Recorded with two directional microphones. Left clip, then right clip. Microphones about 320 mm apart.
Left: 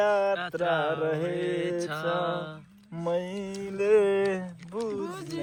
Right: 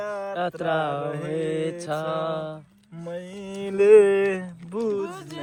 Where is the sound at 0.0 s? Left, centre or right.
Left.